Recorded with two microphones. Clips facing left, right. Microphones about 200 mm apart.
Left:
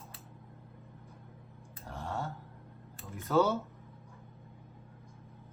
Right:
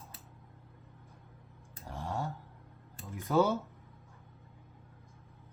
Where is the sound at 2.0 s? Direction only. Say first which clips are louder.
Right 1 dB; 15° right (ahead or behind).